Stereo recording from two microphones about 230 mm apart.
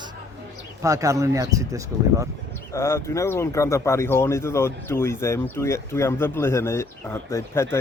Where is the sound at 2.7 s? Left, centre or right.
Centre.